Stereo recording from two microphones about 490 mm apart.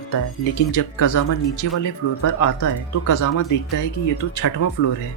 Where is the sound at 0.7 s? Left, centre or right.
Left.